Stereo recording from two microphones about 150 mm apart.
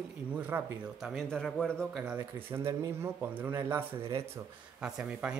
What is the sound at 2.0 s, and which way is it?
Speech, 15° right (ahead or behind).